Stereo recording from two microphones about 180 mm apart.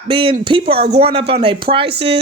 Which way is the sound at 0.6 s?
65° right (ahead or behind).